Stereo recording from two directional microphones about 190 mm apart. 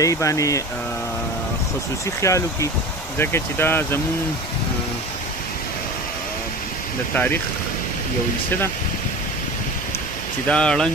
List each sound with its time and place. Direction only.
0.0 s speech: 15° left (ahead or behind)
2.2 s speech: 15° left (ahead or behind)
10.5 s speech: 5° left (ahead or behind)